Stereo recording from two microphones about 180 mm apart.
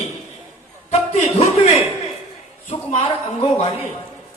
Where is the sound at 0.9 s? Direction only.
35° left (ahead or behind).